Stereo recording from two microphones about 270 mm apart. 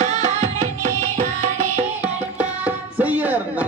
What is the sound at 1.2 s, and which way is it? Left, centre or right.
Music, right.